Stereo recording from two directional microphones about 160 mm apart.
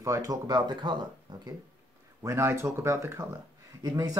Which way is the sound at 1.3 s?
30° right (ahead or behind).